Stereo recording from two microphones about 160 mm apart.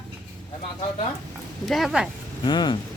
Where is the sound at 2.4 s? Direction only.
30° left (ahead or behind).